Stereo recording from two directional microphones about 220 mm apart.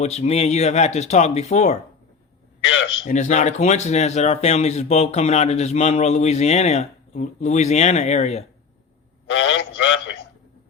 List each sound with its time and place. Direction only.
0.0 s speech: 30° left (ahead or behind)
2.7 s a man's voice: 55° left (ahead or behind)
3.1 s speech: 35° left (ahead or behind)
9.4 s a sound: 60° left (ahead or behind)